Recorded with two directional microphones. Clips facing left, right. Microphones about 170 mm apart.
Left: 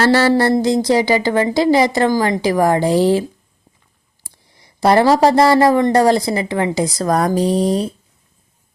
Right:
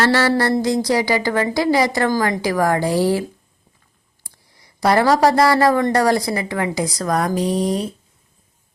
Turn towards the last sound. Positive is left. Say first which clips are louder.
# left 4 dB
turn(degrees=30)  # may be behind; listen again after turning